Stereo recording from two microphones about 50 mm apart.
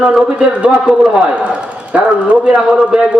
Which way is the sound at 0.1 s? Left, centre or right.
Centre.